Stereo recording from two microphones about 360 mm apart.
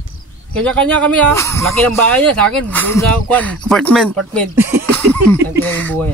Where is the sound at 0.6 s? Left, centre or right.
Centre.